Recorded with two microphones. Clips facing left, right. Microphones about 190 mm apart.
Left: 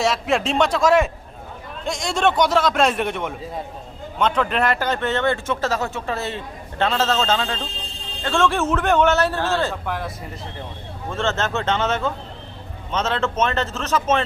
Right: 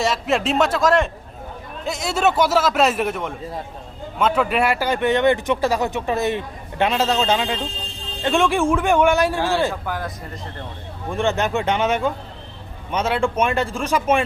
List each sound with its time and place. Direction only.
0.0 s a man's voice: centre (ahead or behind)
9.8 s a man's voice: centre (ahead or behind)
11.1 s speech: 15° right (ahead or behind)